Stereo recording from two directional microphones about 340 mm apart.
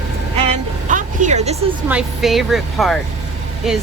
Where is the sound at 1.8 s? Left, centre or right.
Centre.